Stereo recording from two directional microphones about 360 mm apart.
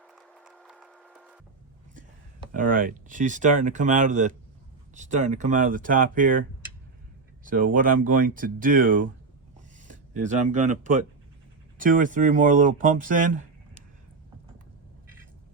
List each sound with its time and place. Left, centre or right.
0.1 s a sound: centre
2.0 s speech: right
7.4 s speech: right